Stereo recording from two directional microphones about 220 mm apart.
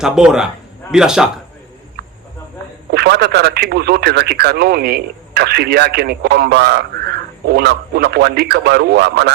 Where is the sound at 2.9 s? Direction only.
50° right (ahead or behind).